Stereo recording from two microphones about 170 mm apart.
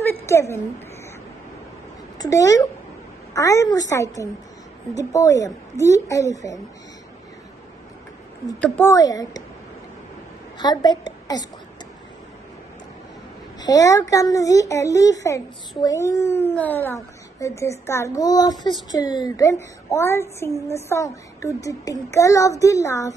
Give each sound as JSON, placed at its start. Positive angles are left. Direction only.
{"t": 0.0, "sound": "a sound", "side_deg": 15}
{"t": 2.1, "sound": "a woman's voice", "side_deg": 20}
{"t": 8.5, "sound": "speech", "side_deg": 10}
{"t": 10.6, "sound": "a woman's voice", "side_deg": 25}
{"t": 13.6, "sound": "a child's voice", "side_deg": 20}